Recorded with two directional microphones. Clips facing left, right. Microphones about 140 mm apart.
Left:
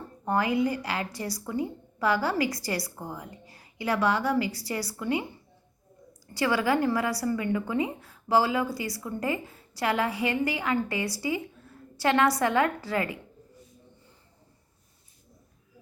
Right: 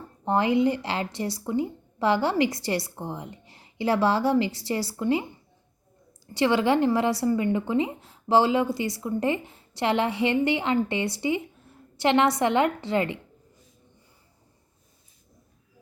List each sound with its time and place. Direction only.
0.3 s a woman's voice: 25° right (ahead or behind)
6.3 s a woman's voice: 25° right (ahead or behind)